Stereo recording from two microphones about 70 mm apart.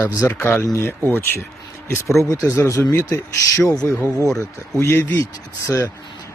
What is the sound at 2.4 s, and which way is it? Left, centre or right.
Speech, left.